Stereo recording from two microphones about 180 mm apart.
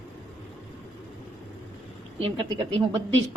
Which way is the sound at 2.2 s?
30° right (ahead or behind).